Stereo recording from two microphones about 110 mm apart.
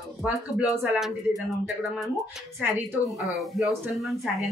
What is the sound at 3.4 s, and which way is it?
Speech, centre (ahead or behind).